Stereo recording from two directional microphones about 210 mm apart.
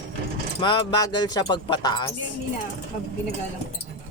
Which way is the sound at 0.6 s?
20° left (ahead or behind).